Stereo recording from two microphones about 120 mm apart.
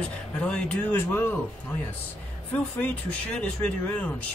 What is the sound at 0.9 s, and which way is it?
Speech, 20° left (ahead or behind).